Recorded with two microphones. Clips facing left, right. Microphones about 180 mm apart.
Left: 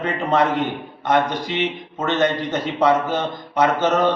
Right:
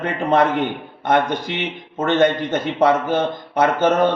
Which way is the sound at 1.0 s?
55° right (ahead or behind).